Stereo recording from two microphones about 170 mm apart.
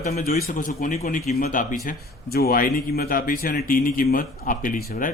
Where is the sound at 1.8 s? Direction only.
65° left (ahead or behind).